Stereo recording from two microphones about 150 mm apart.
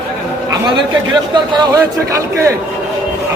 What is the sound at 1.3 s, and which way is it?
Speech, 30° right (ahead or behind).